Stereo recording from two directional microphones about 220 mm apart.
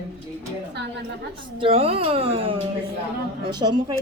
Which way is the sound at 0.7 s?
50° right (ahead or behind).